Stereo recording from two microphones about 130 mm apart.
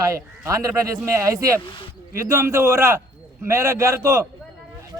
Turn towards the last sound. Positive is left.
turn(degrees=-25)  # may be behind; listen again after turning